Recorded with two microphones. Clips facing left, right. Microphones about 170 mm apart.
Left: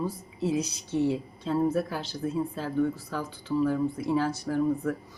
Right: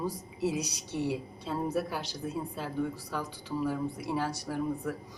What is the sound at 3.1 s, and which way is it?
A woman's voice, 15° right (ahead or behind).